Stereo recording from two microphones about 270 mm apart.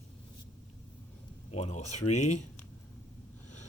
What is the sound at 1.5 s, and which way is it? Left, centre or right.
Speech, left.